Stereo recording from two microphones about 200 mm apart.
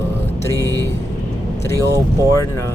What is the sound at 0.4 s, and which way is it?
Speech, 15° left (ahead or behind).